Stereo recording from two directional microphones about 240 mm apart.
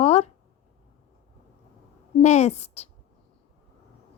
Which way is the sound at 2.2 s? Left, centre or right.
Left.